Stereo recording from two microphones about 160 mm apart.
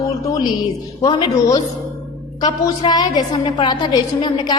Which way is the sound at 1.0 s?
25° left (ahead or behind).